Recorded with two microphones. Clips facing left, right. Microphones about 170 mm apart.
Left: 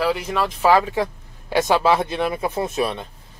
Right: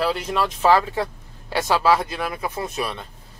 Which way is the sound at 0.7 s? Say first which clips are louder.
Left 2 dB; 15° left (ahead or behind).